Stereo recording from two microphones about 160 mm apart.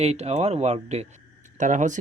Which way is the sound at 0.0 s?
40° right (ahead or behind).